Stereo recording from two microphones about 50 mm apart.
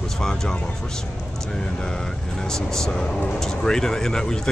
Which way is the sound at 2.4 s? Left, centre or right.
Centre.